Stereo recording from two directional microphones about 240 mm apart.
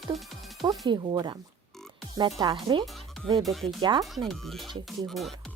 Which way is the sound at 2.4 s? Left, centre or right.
Centre.